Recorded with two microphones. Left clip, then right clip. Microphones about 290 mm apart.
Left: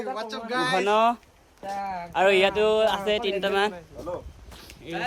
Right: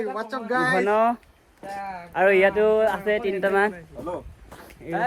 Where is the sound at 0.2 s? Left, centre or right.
Centre.